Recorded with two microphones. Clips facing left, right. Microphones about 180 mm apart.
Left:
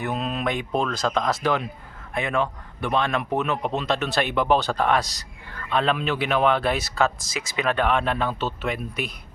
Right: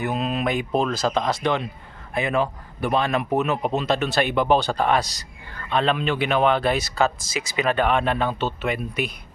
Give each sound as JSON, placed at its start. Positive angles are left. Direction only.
{"t": 0.0, "sound": "speech", "side_deg": 0}